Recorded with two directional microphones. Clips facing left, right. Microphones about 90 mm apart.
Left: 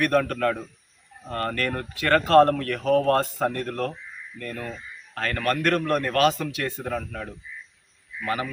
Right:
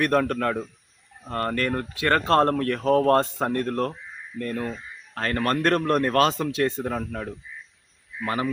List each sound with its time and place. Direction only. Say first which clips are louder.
0.0 s speech: even; 25° right (ahead or behind)